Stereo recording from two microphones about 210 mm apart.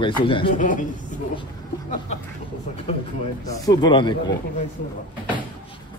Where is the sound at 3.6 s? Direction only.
20° left (ahead or behind).